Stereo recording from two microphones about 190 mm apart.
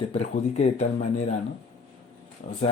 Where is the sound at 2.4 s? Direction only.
45° left (ahead or behind).